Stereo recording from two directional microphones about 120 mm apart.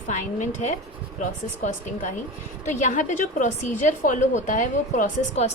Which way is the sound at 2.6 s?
90° left.